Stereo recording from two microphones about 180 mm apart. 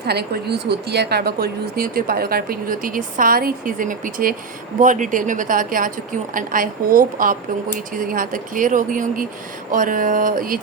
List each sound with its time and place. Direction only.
0.0 s speech: 65° right (ahead or behind)